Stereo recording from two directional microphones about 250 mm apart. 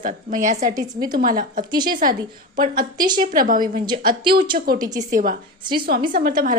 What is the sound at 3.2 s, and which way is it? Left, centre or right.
A woman's voice, right.